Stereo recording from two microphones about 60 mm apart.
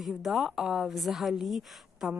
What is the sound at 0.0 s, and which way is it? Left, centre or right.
Speech, centre.